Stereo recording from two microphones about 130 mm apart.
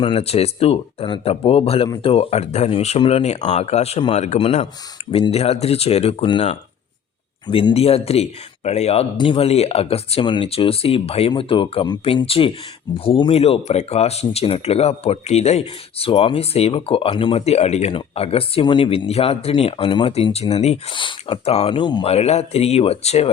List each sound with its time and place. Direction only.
0.0 s speech: 45° left (ahead or behind)
7.4 s speech: 35° left (ahead or behind)
7.7 s speech: 50° left (ahead or behind)
9.1 s speech: 40° left (ahead or behind)
20.9 s speech: 40° left (ahead or behind)
21.8 s speech: 35° left (ahead or behind)
22.0 s speech: 55° left (ahead or behind)